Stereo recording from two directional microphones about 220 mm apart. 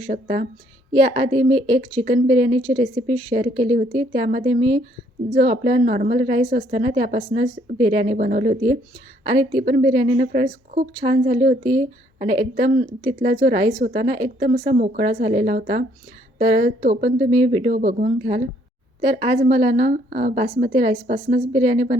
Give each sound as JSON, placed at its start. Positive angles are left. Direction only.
{"t": 0.0, "sound": "a woman's voice", "side_deg": -35}
{"t": 8.2, "sound": "a woman's voice", "side_deg": -40}
{"t": 15.5, "sound": "a woman's voice", "side_deg": -40}
{"t": 17.3, "sound": "a woman's voice", "side_deg": -30}
{"t": 19.5, "sound": "a woman's voice", "side_deg": -30}
{"t": 21.6, "sound": "speech", "side_deg": -30}